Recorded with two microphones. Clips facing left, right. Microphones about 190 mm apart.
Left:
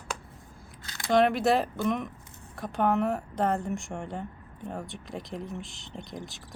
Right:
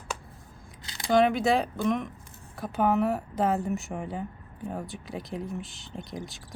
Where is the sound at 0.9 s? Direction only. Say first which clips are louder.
Right 2 dB; 20° right (ahead or behind).